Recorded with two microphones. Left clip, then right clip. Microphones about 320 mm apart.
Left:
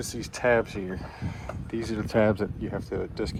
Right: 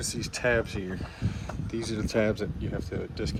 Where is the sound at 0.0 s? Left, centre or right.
Centre.